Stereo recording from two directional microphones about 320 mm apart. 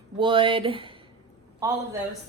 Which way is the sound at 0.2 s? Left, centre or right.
Centre.